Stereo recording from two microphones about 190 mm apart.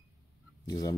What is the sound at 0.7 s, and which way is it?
Speech, 20° left (ahead or behind).